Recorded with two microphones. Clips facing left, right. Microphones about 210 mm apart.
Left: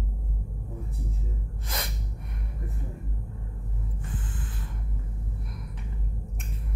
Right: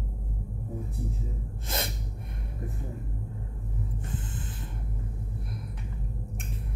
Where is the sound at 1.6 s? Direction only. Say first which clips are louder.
Right 3 dB; 25° right (ahead or behind).